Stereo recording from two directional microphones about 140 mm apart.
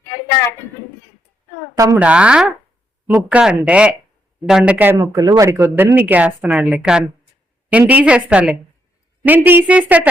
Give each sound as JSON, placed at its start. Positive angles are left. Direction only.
{"t": 1.7, "sound": "speech", "side_deg": -20}
{"t": 2.0, "sound": "a woman's voice", "side_deg": -10}
{"t": 4.9, "sound": "a woman's voice", "side_deg": -25}